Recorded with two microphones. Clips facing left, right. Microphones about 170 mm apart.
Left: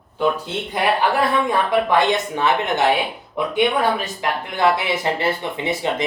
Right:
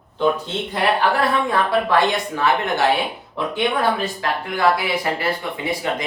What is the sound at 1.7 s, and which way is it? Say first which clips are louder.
Speech: left 1 dB; 20° left (ahead or behind).